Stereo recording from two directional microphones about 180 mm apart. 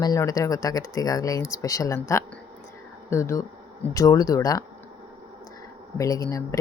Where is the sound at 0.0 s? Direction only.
20° left (ahead or behind).